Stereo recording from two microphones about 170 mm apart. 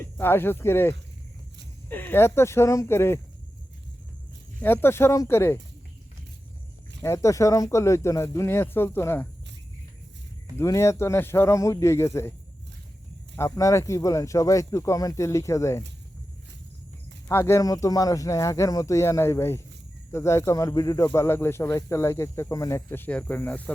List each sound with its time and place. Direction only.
0.2 s speech: 10° left (ahead or behind)
4.6 s speech: 15° left (ahead or behind)
7.0 s speech: 15° left (ahead or behind)
10.6 s speech: 15° left (ahead or behind)
13.3 s speech: 15° left (ahead or behind)
17.2 s speech: 15° left (ahead or behind)